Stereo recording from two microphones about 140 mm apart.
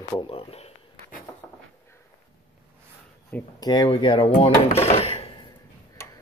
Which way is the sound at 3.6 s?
30° left (ahead or behind).